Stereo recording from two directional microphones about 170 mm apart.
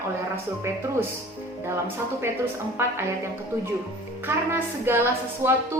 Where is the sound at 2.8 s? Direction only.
15° right (ahead or behind).